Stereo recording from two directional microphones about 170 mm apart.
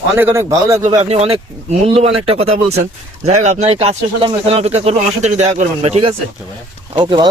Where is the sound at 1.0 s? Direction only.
40° right (ahead or behind).